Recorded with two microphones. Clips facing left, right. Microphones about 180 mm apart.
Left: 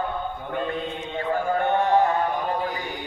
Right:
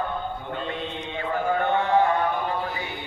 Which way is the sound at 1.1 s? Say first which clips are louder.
Left 1 dB; 40° left (ahead or behind).